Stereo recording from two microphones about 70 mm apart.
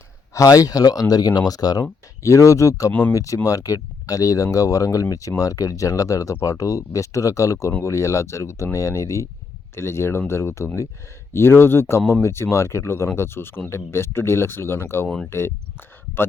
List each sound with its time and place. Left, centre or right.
0.3 s speech: left
15.0 s speech: centre
15.3 s speech: left